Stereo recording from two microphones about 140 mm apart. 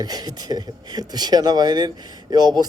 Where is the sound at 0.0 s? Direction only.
30° right (ahead or behind).